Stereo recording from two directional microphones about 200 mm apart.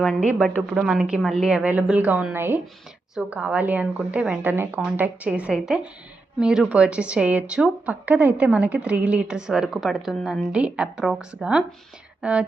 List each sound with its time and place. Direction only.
0.0 s a woman's voice: centre (ahead or behind)